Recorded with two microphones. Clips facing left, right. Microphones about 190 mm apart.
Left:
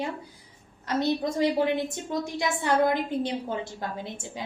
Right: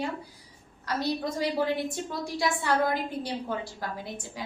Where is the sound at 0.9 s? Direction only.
20° left (ahead or behind).